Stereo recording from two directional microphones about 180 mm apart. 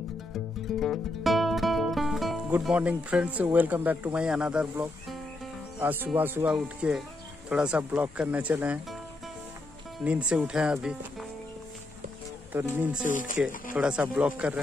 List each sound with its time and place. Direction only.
0.7 s speech: centre (ahead or behind)
10.0 s speech: 5° right (ahead or behind)
12.5 s speech: 10° right (ahead or behind)